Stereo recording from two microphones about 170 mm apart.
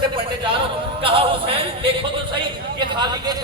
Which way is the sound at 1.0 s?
30° right (ahead or behind).